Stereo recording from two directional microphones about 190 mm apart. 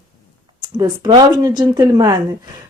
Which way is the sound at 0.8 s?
20° right (ahead or behind).